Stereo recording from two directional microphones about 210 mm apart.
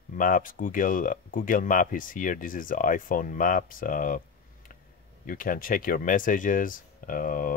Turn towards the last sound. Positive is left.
turn(degrees=40)  # may be behind; listen again after turning